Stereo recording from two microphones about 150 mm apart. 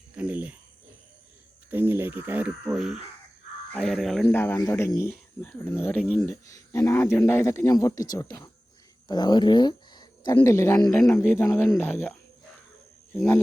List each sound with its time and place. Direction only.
0.2 s speech: 10° right (ahead or behind)
1.7 s crow: 15° right (ahead or behind)
3.7 s speech: 5° left (ahead or behind)
4.4 s speech: 15° left (ahead or behind)